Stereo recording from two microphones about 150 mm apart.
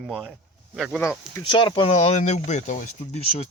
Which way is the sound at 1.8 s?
45° left (ahead or behind).